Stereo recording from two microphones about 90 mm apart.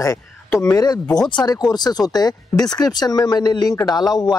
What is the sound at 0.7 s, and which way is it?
A man's voice, 45° left (ahead or behind).